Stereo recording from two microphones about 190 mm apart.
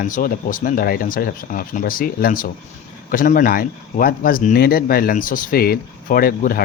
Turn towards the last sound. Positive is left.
turn(degrees=50)  # may be behind; listen again after turning